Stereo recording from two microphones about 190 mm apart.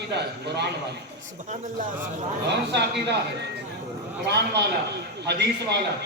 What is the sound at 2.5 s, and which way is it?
Speech, 65° right (ahead or behind).